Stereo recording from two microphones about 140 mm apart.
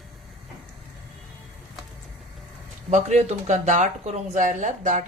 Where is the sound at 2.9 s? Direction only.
55° right (ahead or behind).